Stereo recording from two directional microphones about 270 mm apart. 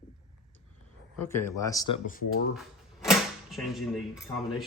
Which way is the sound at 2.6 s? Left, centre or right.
Centre.